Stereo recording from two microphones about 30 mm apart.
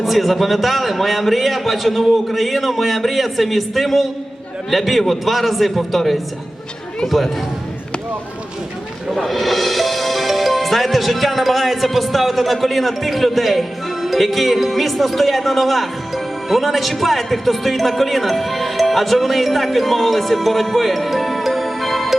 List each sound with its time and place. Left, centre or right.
0.0 s a man's voice: centre
7.0 s speech: centre
9.1 s speech: centre